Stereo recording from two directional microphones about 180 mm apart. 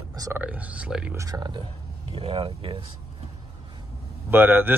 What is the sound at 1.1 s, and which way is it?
Speech, 20° right (ahead or behind).